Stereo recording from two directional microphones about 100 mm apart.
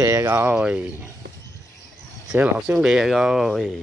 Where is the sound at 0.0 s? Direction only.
25° right (ahead or behind).